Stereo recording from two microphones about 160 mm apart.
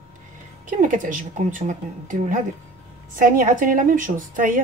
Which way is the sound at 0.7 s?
55° right (ahead or behind).